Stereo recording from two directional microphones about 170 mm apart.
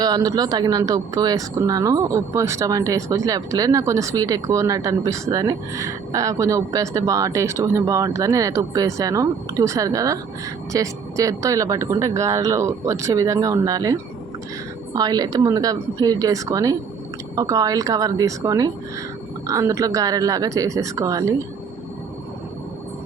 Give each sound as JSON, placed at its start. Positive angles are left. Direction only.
{"t": 0.0, "sound": "speech", "side_deg": -20}